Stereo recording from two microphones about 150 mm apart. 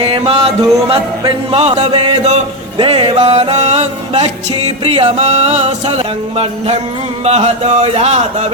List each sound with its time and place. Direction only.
0.0 s music: 40° right (ahead or behind)